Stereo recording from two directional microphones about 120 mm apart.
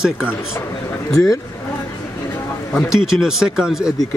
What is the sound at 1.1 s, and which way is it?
Speech, 30° left (ahead or behind).